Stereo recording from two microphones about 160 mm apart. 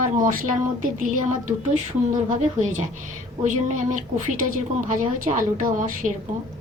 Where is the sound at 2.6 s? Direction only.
50° right (ahead or behind).